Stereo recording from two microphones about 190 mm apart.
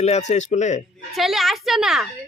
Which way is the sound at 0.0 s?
35° left (ahead or behind).